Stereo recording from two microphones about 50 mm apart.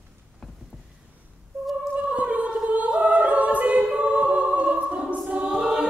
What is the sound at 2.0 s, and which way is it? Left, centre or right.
Singing, right.